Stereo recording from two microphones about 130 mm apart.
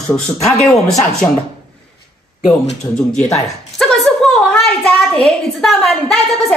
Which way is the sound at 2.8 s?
25° left (ahead or behind).